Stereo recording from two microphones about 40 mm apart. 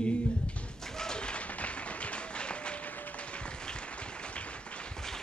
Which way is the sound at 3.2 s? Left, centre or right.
Left.